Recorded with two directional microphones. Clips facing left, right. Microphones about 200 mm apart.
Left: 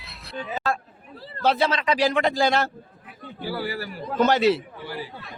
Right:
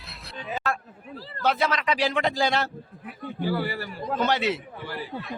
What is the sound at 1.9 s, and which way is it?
Speech, 45° left (ahead or behind).